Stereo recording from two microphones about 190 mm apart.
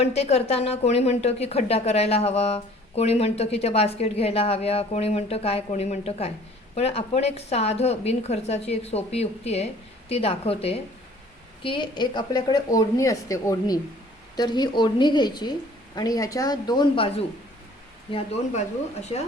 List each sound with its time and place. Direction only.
0.0 s a woman's voice: 35° left (ahead or behind)